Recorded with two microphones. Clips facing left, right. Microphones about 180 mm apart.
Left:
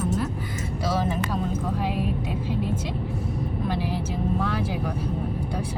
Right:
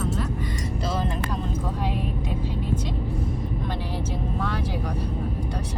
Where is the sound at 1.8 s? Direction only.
5° left (ahead or behind).